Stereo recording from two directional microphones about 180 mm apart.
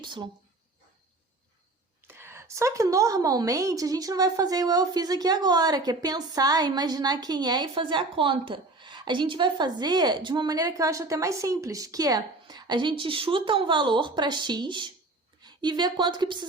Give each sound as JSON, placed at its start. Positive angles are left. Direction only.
{"t": 0.0, "sound": "speech", "side_deg": -25}
{"t": 2.0, "sound": "a woman's voice", "side_deg": -15}